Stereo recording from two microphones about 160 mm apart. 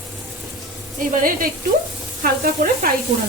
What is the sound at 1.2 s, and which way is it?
A woman's voice, 65° right (ahead or behind).